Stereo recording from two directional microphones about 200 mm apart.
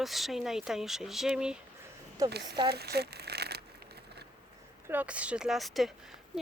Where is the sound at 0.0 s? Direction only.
Centre (ahead or behind).